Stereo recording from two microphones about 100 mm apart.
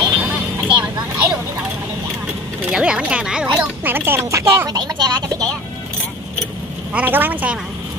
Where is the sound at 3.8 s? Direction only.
20° right (ahead or behind).